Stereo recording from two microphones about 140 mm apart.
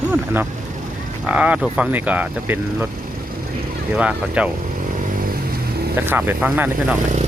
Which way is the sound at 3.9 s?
10° right (ahead or behind).